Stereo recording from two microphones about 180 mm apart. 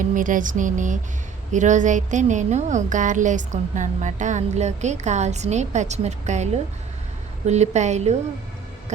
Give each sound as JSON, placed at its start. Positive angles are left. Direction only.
{"t": 0.0, "sound": "music", "side_deg": -45}
{"t": 1.5, "sound": "speech", "side_deg": -45}